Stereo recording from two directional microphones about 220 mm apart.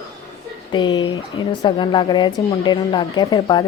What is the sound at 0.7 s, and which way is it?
A woman's voice, 20° left (ahead or behind).